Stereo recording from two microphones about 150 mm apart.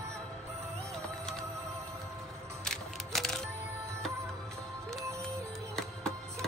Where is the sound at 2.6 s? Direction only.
5° left (ahead or behind).